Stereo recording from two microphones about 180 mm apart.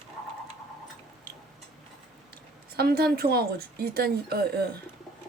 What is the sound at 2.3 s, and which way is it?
A woman's voice, 60° right (ahead or behind).